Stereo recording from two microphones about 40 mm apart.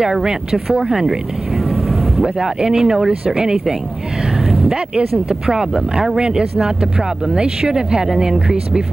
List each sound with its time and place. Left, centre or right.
0.0 s speech: centre
2.2 s speech: centre
4.9 s speech: centre